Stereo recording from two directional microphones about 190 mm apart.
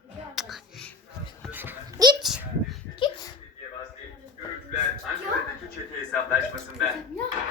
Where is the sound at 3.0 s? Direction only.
25° left (ahead or behind).